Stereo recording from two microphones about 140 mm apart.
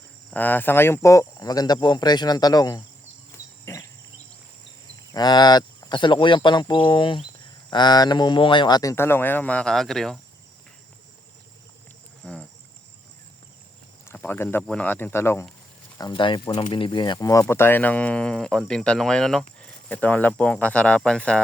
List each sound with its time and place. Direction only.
0.3 s speech: 10° left (ahead or behind)
3.3 s insect: 20° left (ahead or behind)
5.1 s speech: 30° left (ahead or behind); by 10.2 s 5° left (ahead or behind)
12.2 s cricket: 5° left (ahead or behind)
14.0 s speech: 15° left (ahead or behind)
16.0 s speech: 30° left (ahead or behind)
17.4 s speech: 15° left (ahead or behind)